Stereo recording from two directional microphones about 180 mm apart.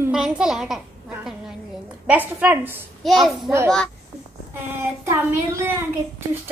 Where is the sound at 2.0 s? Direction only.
10° right (ahead or behind).